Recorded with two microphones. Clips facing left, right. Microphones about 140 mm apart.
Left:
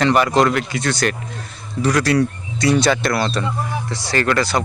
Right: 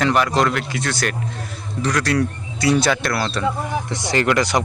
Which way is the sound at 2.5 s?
5° right (ahead or behind).